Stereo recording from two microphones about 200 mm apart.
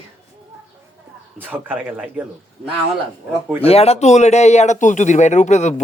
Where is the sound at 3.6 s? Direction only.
30° left (ahead or behind).